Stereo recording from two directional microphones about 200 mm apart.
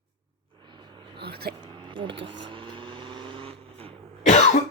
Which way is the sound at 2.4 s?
25° right (ahead or behind).